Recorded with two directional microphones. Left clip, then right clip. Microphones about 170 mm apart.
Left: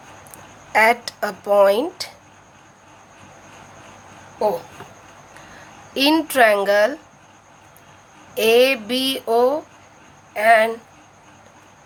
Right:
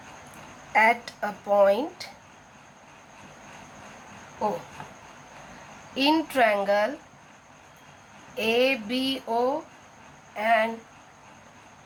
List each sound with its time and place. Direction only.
0.7 s speech: 50° left (ahead or behind)
5.9 s speech: 50° left (ahead or behind)
8.4 s speech: 50° left (ahead or behind)